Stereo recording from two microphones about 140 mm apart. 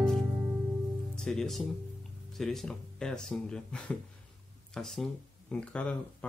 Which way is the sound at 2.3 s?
Centre (ahead or behind).